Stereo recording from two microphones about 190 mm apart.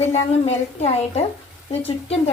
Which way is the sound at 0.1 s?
35° left (ahead or behind).